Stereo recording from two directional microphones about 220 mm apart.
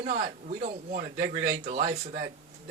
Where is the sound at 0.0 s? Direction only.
35° right (ahead or behind).